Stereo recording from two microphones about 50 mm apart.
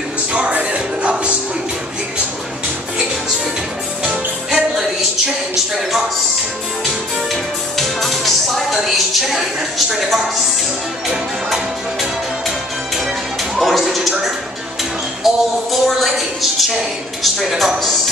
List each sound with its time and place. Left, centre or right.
0.3 s music: right
4.5 s music: centre
5.8 s a woman's voice: centre
7.7 s music: centre
8.8 s a sound: centre
9.8 s a woman's voice: centre
11.1 s music: centre
13.6 s a sound: centre
15.2 s a woman's voice: centre